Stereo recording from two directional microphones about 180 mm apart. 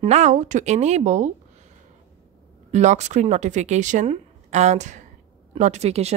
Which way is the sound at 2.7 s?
40° right (ahead or behind).